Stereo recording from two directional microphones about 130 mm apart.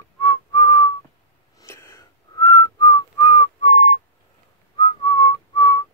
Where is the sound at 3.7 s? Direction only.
55° left (ahead or behind).